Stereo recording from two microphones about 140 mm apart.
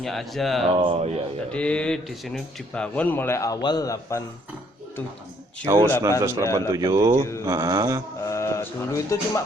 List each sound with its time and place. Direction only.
0.0 s speech: centre (ahead or behind)
0.7 s speech: 40° right (ahead or behind)
1.5 s speech: 10° left (ahead or behind); by 4.2 s 25° left (ahead or behind)
5.6 s speech: 20° right (ahead or behind)
8.2 s speech: 20° left (ahead or behind)